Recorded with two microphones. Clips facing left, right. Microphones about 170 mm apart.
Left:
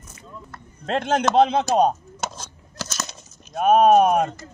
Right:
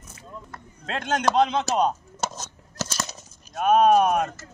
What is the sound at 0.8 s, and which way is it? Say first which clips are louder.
A man's voice: left 3 dB; 55° left (ahead or behind).